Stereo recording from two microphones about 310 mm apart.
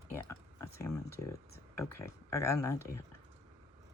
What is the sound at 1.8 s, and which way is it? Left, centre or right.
Speech, centre.